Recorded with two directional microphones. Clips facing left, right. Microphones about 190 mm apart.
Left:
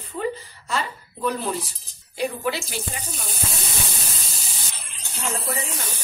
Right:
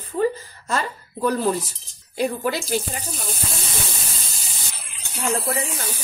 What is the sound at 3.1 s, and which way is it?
Sizzle, centre (ahead or behind).